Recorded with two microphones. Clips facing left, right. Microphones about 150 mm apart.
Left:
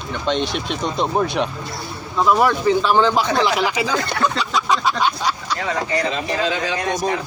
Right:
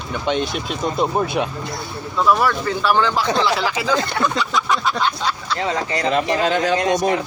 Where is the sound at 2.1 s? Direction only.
20° left (ahead or behind).